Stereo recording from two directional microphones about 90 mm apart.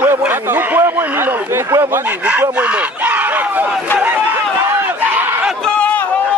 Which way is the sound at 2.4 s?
20° right (ahead or behind).